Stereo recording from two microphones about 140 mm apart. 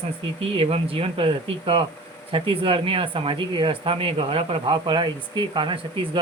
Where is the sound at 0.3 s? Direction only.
40° right (ahead or behind).